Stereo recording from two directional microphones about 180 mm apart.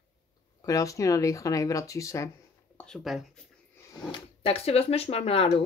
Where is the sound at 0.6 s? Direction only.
20° left (ahead or behind).